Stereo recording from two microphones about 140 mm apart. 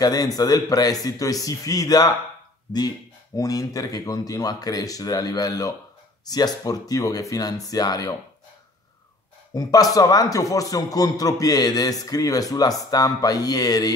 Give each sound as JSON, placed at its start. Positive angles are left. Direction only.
{"t": 0.0, "sound": "a man's voice", "side_deg": 25}
{"t": 3.3, "sound": "a man's voice", "side_deg": 25}
{"t": 9.5, "sound": "a man's voice", "side_deg": 25}